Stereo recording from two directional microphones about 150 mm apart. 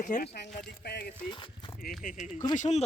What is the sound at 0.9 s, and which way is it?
Speech, 90° left.